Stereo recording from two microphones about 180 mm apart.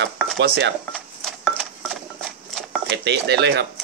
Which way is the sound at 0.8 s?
5° left (ahead or behind).